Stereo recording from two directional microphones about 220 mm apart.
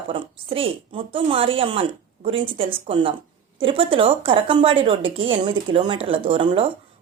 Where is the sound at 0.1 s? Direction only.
25° right (ahead or behind).